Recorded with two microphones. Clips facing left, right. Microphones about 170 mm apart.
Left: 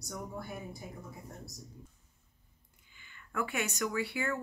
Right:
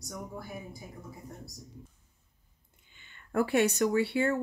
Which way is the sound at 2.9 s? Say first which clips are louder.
Even; 25° right (ahead or behind).